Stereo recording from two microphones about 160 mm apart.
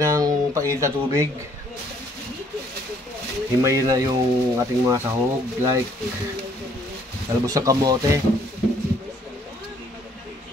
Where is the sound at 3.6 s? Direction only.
20° right (ahead or behind).